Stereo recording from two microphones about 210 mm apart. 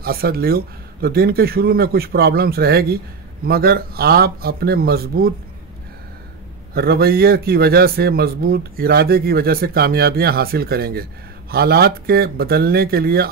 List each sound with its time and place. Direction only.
0.0 s a man's voice: 45° right (ahead or behind)
6.7 s a man's voice: 50° right (ahead or behind)